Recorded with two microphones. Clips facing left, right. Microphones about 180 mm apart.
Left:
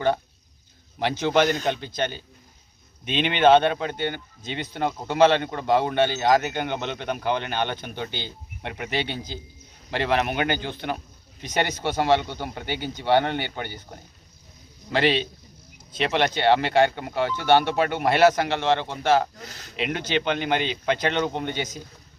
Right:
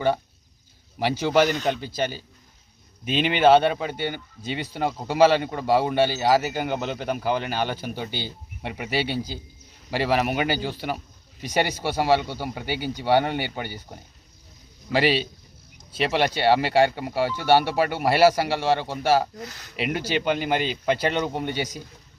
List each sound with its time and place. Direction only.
0.9 s a man's voice: 10° right (ahead or behind)
14.9 s speech: 5° right (ahead or behind)
19.5 s speech: 30° left (ahead or behind)
19.7 s speech: 5° right (ahead or behind)